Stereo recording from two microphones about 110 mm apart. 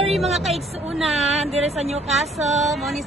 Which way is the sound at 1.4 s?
70° right (ahead or behind).